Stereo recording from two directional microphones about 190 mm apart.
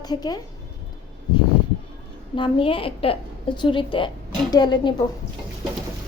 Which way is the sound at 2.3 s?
25° left (ahead or behind).